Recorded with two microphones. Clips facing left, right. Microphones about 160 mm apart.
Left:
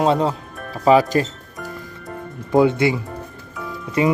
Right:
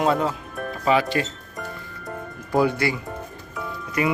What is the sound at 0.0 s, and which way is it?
Speech, 30° left (ahead or behind).